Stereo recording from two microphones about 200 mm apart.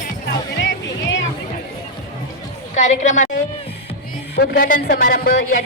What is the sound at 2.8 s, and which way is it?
Speech, 35° left (ahead or behind).